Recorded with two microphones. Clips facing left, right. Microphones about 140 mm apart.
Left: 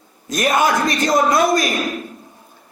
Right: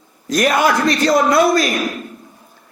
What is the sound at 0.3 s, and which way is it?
A man's voice, 20° left (ahead or behind).